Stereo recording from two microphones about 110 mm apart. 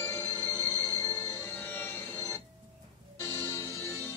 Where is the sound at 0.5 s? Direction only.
20° left (ahead or behind).